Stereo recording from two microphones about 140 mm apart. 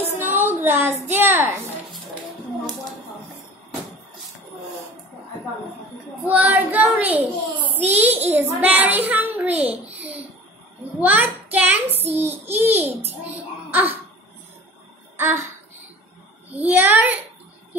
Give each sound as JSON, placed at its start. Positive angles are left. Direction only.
{"t": 0.2, "sound": "a sound", "side_deg": -15}
{"t": 1.0, "sound": "a child's voice", "side_deg": -15}
{"t": 6.2, "sound": "a child's voice", "side_deg": -10}
{"t": 9.9, "sound": "a sound", "side_deg": -10}
{"t": 11.0, "sound": "a child's voice", "side_deg": -10}
{"t": 11.5, "sound": "hands", "side_deg": -10}
{"t": 12.0, "sound": "a child's voice", "side_deg": -15}
{"t": 13.7, "sound": "cough", "side_deg": -15}
{"t": 15.1, "sound": "a sound", "side_deg": -15}
{"t": 16.5, "sound": "a child's voice", "side_deg": -10}